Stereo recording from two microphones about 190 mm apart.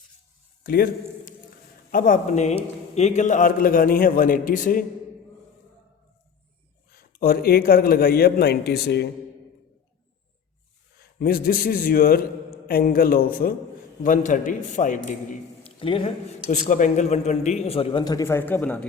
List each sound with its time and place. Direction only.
0.6 s a man's voice: 50° left (ahead or behind)
6.9 s a man's voice: 50° left (ahead or behind)
11.2 s a man's voice: 50° left (ahead or behind)
15.6 s a man's voice: 30° left (ahead or behind)
16.5 s speech: 40° left (ahead or behind); by 18.9 s 10° left (ahead or behind)